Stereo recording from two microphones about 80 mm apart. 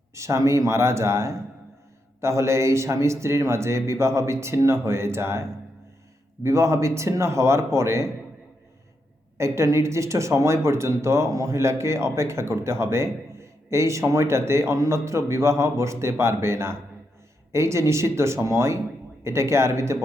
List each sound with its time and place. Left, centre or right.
0.1 s speech: right
9.4 s speech: right